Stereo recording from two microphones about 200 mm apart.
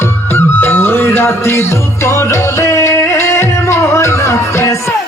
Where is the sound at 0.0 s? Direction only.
10° left (ahead or behind).